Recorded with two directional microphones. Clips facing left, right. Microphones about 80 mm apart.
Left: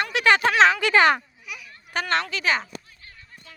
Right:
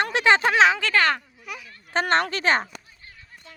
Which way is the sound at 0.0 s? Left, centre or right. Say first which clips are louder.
Right 2 dB; right.